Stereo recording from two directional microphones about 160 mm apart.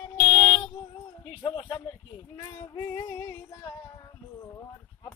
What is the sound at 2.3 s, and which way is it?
Female singing, 20° left (ahead or behind).